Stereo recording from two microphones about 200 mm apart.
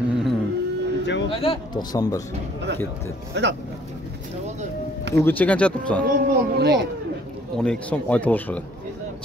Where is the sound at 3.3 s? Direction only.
60° right (ahead or behind).